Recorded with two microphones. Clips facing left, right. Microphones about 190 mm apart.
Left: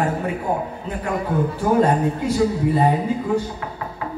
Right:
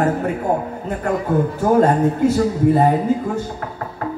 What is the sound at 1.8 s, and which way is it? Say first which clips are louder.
Speech: right 4 dB; 45° right (ahead or behind).